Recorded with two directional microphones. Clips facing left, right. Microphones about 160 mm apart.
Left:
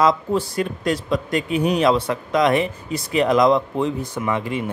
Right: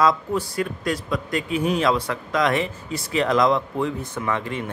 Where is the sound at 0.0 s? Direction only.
25° left (ahead or behind).